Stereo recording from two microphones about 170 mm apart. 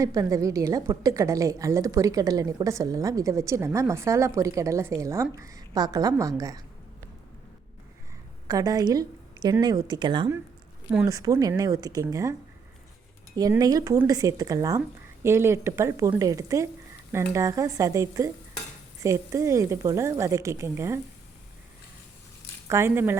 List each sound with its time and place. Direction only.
0.0 s a woman's voice: 20° right (ahead or behind)
8.4 s a woman's voice: 20° right (ahead or behind)
13.3 s a woman's voice: 20° right (ahead or behind)
22.7 s a woman's voice: 15° right (ahead or behind)